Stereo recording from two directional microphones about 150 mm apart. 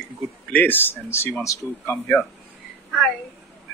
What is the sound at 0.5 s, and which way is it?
Speech, 10° left (ahead or behind).